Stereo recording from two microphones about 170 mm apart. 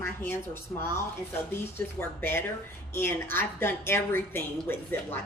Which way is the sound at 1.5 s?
15° left (ahead or behind).